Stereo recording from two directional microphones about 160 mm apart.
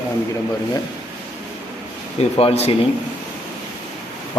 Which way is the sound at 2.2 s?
40° left (ahead or behind).